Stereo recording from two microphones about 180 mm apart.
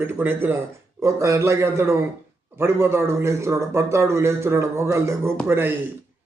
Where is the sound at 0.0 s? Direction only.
10° right (ahead or behind).